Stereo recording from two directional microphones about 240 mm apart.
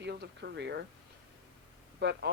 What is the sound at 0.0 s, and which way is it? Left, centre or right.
Speech, right.